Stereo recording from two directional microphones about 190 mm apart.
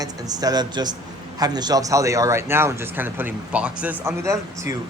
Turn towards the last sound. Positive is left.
turn(degrees=-15)  # may be behind; listen again after turning